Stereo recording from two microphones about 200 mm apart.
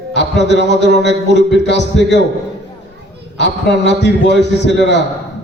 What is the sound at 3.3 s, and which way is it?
A man's voice, 60° left (ahead or behind).